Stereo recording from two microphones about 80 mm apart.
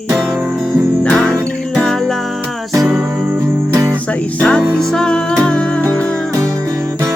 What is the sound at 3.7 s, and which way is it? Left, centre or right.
Music, right.